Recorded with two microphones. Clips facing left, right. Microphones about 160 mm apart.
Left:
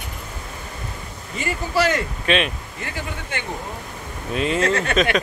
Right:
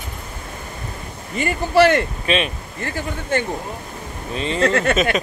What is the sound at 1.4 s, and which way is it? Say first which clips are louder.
Speech: right 6 dB; 60° right (ahead or behind).